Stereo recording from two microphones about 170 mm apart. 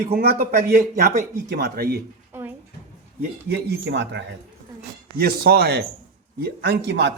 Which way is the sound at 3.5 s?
80° right.